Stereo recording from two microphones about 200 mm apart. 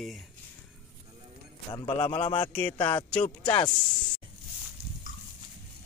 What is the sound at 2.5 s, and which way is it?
Music, 10° left (ahead or behind).